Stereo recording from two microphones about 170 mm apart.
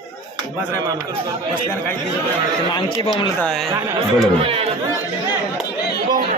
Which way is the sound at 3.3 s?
5° left (ahead or behind).